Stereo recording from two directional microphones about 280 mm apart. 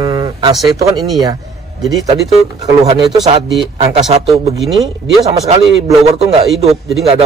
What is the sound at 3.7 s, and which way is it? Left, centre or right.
Speech, right.